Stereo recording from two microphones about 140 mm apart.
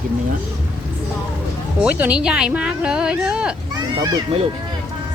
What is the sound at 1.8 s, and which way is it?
Speech, 10° right (ahead or behind).